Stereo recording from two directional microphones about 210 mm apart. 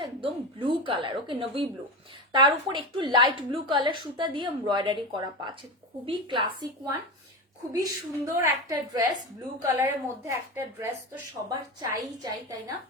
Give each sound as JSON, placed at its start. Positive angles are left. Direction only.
{"t": 0.0, "sound": "a woman's voice", "side_deg": -25}